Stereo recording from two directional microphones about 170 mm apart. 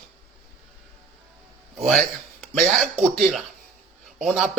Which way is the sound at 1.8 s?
Centre (ahead or behind).